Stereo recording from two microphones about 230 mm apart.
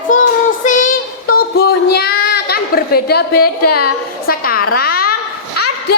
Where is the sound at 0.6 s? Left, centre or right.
Left.